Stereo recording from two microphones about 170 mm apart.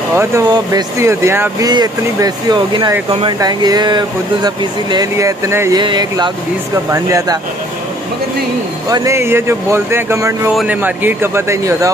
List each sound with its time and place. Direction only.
0.1 s speech: 15° right (ahead or behind); by 3.3 s 35° right (ahead or behind)
3.3 s speech: 25° right (ahead or behind)
8.8 s speech: 20° right (ahead or behind)
10.5 s speech: centre (ahead or behind)
10.8 s speech: 10° right (ahead or behind)